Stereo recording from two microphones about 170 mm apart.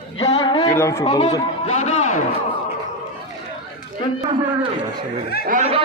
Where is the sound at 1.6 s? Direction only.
40° left (ahead or behind).